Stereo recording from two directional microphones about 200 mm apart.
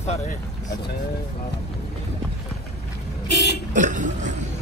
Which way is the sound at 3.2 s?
55° left (ahead or behind).